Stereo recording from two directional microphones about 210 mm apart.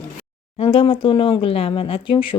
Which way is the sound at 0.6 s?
25° left (ahead or behind).